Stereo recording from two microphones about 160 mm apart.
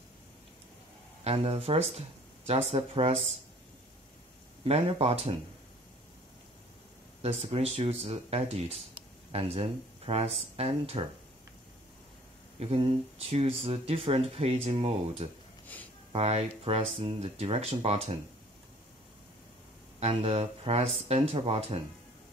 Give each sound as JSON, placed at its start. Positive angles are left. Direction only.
{"t": 1.2, "sound": "speech", "side_deg": -40}
{"t": 4.6, "sound": "speech", "side_deg": -40}
{"t": 7.2, "sound": "speech", "side_deg": -40}
{"t": 12.5, "sound": "speech", "side_deg": -35}
{"t": 15.6, "sound": "a sound", "side_deg": 10}
{"t": 16.1, "sound": "speech", "side_deg": -40}
{"t": 20.0, "sound": "speech", "side_deg": -40}